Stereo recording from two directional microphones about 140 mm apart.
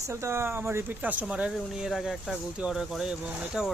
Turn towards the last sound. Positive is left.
turn(degrees=-5)  # may be behind; listen again after turning